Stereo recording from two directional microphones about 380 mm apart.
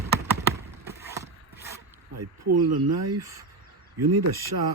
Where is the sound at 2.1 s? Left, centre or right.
Right.